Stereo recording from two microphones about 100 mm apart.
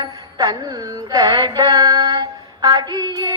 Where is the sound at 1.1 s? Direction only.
45° right (ahead or behind).